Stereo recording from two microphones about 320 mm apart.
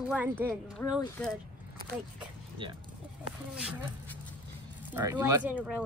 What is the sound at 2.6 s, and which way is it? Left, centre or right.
Speech, centre.